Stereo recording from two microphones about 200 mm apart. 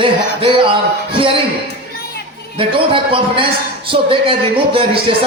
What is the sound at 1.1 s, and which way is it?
Music, 25° right (ahead or behind).